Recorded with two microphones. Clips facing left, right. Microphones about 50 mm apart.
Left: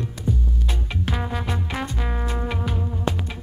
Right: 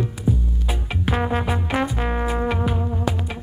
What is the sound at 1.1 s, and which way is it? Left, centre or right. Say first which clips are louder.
Music: right 10 dB; right.